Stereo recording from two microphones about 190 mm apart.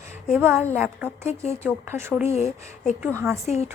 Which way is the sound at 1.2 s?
35° left (ahead or behind).